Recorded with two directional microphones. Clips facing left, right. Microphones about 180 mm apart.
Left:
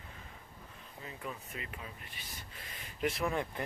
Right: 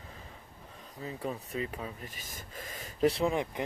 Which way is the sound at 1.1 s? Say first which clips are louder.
Right 7 dB; 35° right (ahead or behind).